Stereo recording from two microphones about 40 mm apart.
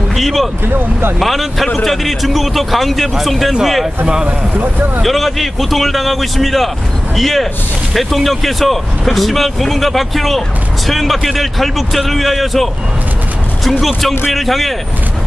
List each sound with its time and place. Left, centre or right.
0.1 s a sound: centre
0.7 s speech: right
1.2 s speech: centre
4.6 s speech: right
5.0 s speech: centre
13.7 s speech: centre